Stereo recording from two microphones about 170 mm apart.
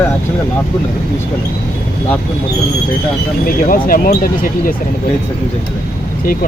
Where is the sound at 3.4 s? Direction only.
55° left (ahead or behind).